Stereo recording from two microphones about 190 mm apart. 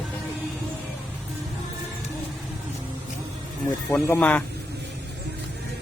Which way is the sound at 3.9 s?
10° left (ahead or behind).